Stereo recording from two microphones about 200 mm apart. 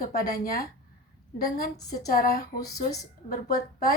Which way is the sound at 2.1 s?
50° left (ahead or behind).